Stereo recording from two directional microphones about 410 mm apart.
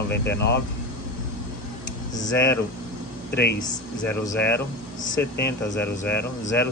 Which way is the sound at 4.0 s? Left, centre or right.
Centre.